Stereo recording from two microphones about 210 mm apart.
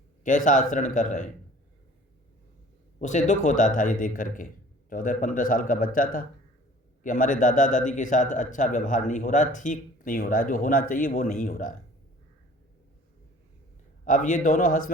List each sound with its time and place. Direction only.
0.3 s speech: 40° left (ahead or behind)
3.0 s speech: 35° left (ahead or behind)
14.0 s speech: 40° left (ahead or behind)